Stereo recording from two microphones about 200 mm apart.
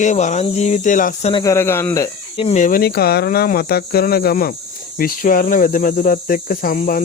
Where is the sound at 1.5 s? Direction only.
10° left (ahead or behind).